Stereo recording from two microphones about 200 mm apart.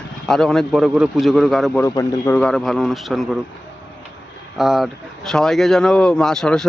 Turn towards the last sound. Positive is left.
turn(degrees=5)  # may be behind; listen again after turning